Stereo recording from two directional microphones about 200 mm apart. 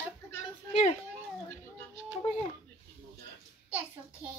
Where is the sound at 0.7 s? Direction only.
35° left (ahead or behind).